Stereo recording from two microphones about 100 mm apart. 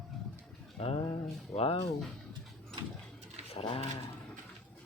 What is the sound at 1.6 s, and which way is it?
Speech, 75° left (ahead or behind).